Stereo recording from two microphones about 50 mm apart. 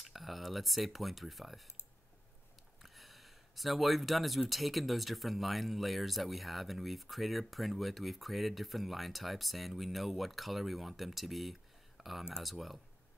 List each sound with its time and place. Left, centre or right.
0.0 s speech: centre
2.8 s speech: centre